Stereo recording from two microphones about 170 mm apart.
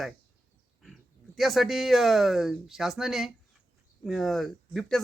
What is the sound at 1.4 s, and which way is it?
A man's voice, centre (ahead or behind).